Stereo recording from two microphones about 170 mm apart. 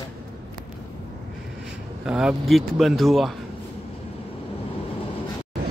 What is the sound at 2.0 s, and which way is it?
Speech, 5° right (ahead or behind).